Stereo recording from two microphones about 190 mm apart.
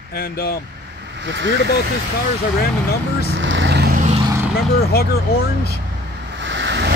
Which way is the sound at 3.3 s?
75° right (ahead or behind).